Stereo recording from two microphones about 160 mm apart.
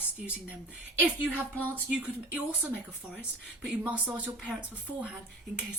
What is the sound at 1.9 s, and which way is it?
Speech, 10° right (ahead or behind).